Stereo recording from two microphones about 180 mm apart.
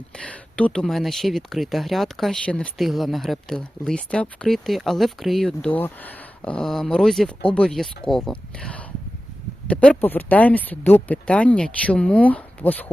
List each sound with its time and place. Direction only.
0.2 s speech: 5° left (ahead or behind)